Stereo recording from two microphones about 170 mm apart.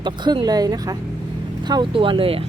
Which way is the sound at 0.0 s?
25° right (ahead or behind).